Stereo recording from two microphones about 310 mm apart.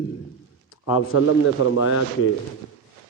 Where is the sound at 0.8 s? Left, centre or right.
Left.